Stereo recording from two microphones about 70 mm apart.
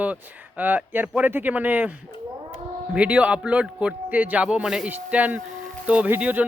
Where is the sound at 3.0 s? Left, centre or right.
Centre.